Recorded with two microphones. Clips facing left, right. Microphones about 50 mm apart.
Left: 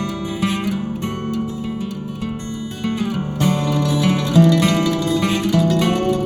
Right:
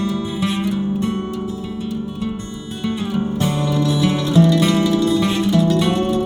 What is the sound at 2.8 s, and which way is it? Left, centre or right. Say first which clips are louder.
Music: right 1 dB; left.